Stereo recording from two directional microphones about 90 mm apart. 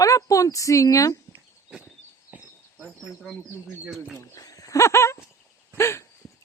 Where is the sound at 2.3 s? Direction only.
15° right (ahead or behind).